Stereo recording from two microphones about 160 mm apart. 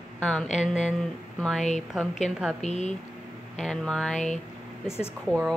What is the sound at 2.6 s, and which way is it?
Speech, 45° left (ahead or behind).